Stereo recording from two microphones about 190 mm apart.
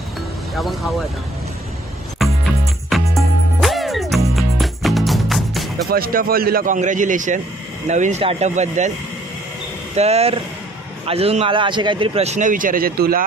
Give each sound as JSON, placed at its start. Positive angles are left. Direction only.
{"t": 0.5, "sound": "speech", "side_deg": 0}
{"t": 2.2, "sound": "music", "side_deg": 0}
{"t": 5.8, "sound": "a man's voice", "side_deg": -50}
{"t": 9.9, "sound": "a man's voice", "side_deg": -35}